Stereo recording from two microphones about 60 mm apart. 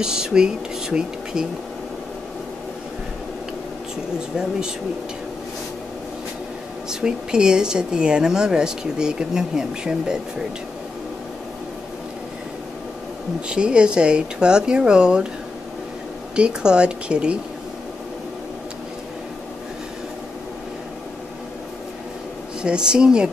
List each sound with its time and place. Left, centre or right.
0.0 s speech: centre
4.4 s a woman's voice: centre
6.9 s a woman's voice: centre
13.5 s a woman's voice: centre
16.3 s a woman's voice: centre
22.6 s a woman's voice: centre